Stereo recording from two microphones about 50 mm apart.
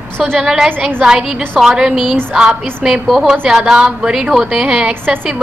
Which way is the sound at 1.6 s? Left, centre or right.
Centre.